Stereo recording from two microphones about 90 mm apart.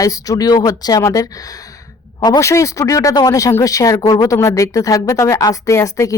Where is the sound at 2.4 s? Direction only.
35° left (ahead or behind).